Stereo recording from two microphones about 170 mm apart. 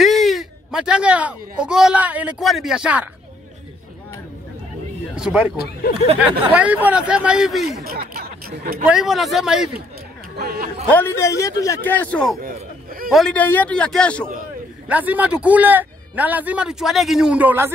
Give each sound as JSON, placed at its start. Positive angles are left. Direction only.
{"t": 0.0, "sound": "a man's voice", "side_deg": 0}
{"t": 5.1, "sound": "a man's voice", "side_deg": -5}
{"t": 6.5, "sound": "speech", "side_deg": -10}
{"t": 7.8, "sound": "speech", "side_deg": -60}
{"t": 8.8, "sound": "speech", "side_deg": -5}
{"t": 10.3, "sound": "speech", "side_deg": -70}
{"t": 10.9, "sound": "a man's voice", "side_deg": 10}
{"t": 14.9, "sound": "a man's voice", "side_deg": -10}